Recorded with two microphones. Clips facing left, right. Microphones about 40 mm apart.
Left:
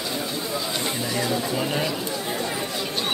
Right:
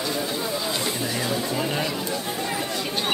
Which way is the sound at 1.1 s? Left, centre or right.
Centre.